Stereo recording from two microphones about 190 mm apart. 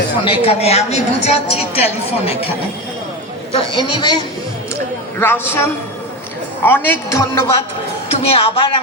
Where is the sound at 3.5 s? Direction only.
25° left (ahead or behind).